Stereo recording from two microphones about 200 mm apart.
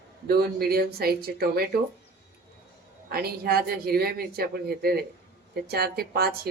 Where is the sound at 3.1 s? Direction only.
50° right (ahead or behind).